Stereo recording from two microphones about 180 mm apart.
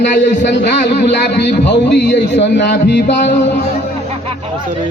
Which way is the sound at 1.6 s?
75° left (ahead or behind).